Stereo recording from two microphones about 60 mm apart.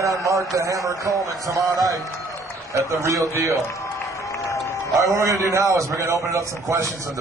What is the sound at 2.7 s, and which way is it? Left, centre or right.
Speech, right.